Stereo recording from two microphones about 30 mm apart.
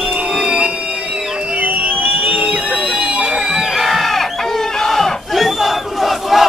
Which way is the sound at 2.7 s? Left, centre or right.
Centre.